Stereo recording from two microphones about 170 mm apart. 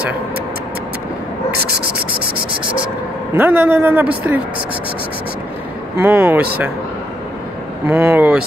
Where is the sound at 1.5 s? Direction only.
65° right (ahead or behind).